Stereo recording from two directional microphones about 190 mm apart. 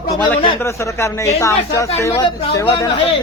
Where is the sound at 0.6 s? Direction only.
15° left (ahead or behind).